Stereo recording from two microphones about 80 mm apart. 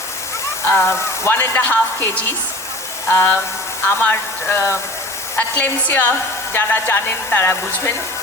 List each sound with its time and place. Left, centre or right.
0.6 s a woman's voice: left